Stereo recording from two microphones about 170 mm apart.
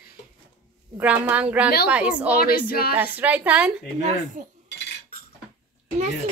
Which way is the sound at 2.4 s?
60° left (ahead or behind).